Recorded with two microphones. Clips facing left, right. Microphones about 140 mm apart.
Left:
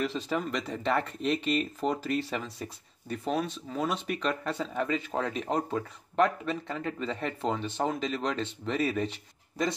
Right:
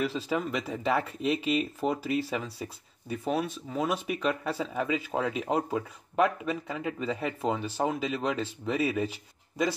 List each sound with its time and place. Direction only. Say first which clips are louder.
0.0 s speech: right 1 dB; 5° right (ahead or behind)